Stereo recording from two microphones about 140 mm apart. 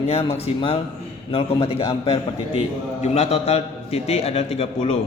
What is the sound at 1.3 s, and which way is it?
A man's voice, 45° left (ahead or behind).